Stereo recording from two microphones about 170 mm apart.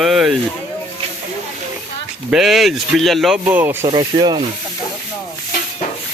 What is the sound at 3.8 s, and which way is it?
Rub, 25° right (ahead or behind).